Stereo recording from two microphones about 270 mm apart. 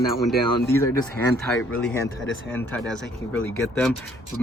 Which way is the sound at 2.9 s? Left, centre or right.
Centre.